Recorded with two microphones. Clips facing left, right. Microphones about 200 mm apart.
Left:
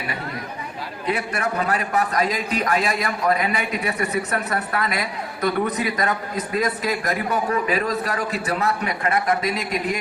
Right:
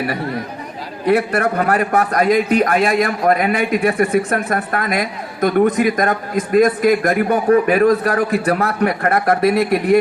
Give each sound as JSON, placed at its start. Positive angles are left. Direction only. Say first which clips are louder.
{"t": 1.0, "sound": "a man's voice", "louder": "right 9 dB", "side_deg": -60}